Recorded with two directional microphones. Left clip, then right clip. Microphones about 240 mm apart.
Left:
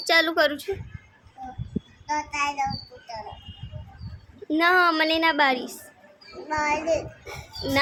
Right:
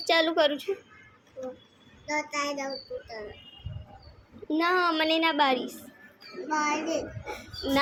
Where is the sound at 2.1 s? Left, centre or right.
Centre.